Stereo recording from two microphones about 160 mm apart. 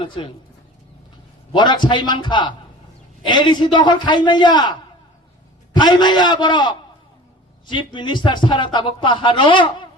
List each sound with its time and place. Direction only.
0.0 s a man's voice: 30° left (ahead or behind)
1.5 s a man's voice: 30° left (ahead or behind)
7.9 s a man's voice: 30° left (ahead or behind)